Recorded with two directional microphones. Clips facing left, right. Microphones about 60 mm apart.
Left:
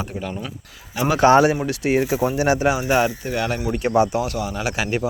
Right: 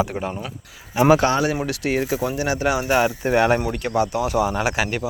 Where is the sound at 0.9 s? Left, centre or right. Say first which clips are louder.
Right 5 dB; right.